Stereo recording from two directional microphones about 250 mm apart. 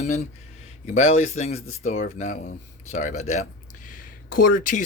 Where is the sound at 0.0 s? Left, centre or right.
Left.